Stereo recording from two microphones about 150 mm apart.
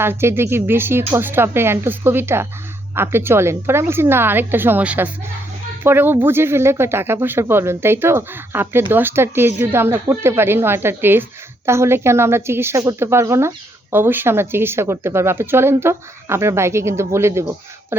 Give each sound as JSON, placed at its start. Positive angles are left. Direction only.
{"t": 0.0, "sound": "a woman's voice", "side_deg": -15}